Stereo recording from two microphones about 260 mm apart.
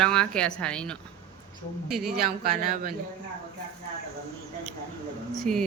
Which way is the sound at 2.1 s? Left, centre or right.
Right.